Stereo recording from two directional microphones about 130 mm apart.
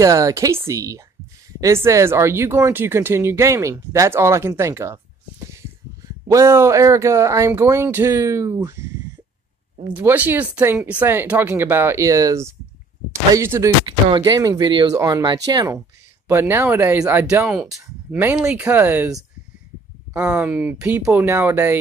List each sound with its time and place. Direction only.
0.0 s speech: 25° right (ahead or behind)
6.2 s speech: 20° right (ahead or behind)
9.9 s speech: 15° right (ahead or behind)
13.8 s speech: 40° right (ahead or behind); by 19.0 s 15° right (ahead or behind)
20.1 s speech: 15° right (ahead or behind)